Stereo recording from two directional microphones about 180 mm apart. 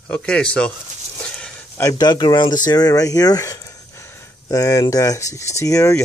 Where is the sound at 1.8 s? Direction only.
25° left (ahead or behind).